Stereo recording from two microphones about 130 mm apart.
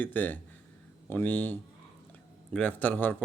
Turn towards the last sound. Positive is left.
turn(degrees=15)  # may be behind; listen again after turning